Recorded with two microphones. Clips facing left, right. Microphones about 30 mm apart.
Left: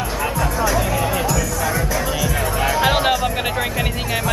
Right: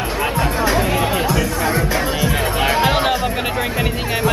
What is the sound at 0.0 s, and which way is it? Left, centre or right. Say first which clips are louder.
Music: right 2 dB; right.